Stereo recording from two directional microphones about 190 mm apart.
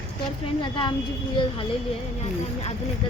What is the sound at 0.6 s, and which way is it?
Speech, 25° left (ahead or behind).